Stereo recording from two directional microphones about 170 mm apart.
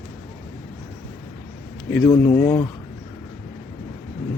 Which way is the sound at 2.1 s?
20° left (ahead or behind).